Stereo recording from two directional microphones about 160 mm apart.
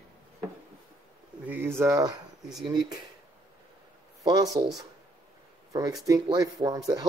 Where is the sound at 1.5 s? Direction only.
15° right (ahead or behind).